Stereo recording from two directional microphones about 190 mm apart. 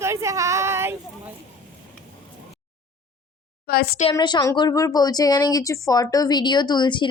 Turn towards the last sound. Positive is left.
turn(degrees=25)  # may be behind; listen again after turning